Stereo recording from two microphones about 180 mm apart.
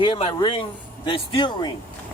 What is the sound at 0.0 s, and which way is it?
Speech, 30° left (ahead or behind).